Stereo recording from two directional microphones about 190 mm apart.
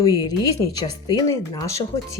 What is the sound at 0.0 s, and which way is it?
Speech, 20° left (ahead or behind).